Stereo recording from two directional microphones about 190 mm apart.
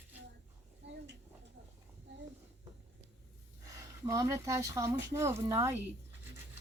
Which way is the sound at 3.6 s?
15° right (ahead or behind).